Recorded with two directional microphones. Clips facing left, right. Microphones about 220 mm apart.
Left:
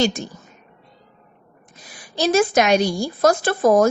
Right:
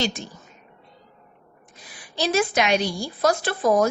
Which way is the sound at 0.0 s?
45° left (ahead or behind).